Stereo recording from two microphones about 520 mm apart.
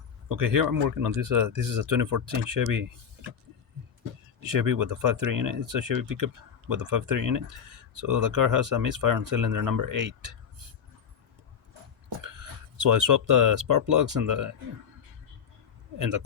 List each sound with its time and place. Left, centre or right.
0.3 s speech: right
4.4 s speech: right
12.9 s speech: right